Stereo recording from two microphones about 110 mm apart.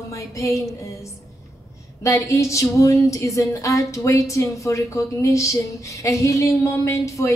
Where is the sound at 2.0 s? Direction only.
30° left (ahead or behind).